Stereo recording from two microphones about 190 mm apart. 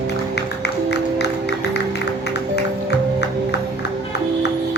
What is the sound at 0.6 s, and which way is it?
Music, 60° left (ahead or behind).